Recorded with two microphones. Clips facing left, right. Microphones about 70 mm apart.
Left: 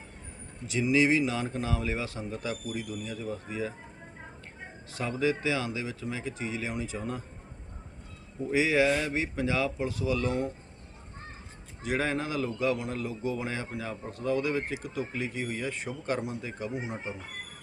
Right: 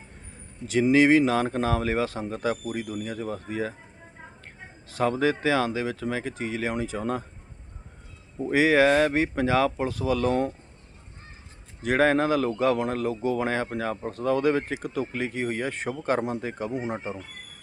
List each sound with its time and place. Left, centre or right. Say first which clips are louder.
0.7 s speech: right 6 dB; right
5.0 s speech: right 5 dB; right
8.4 s speech: right 5 dB; right
8.9 s speech: right 8 dB; right
9.1 s speech: right 6 dB; right
11.9 s speech: right 9 dB; right